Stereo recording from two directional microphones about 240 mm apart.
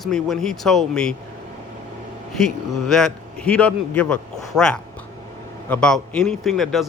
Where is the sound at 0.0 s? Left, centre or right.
Centre.